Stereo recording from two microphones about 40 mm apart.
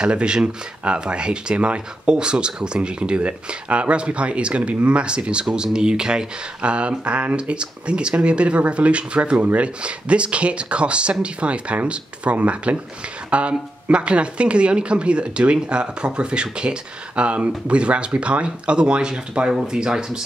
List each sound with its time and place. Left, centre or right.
0.0 s speech: right